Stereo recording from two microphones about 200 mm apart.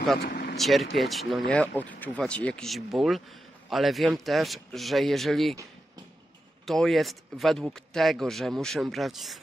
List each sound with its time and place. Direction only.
0.2 s vehicle: 55° left (ahead or behind)
0.6 s speech: centre (ahead or behind)
6.6 s speech: centre (ahead or behind)